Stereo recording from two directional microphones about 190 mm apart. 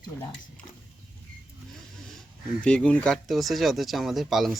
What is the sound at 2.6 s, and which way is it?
Speech, 5° left (ahead or behind).